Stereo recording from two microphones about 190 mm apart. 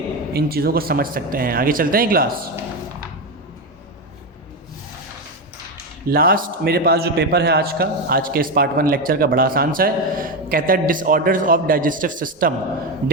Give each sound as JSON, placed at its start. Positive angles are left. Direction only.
{"t": 0.3, "sound": "a man's voice", "side_deg": -55}
{"t": 6.1, "sound": "a man's voice", "side_deg": -50}